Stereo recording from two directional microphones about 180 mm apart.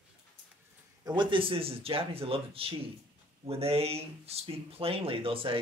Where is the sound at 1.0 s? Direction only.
25° right (ahead or behind).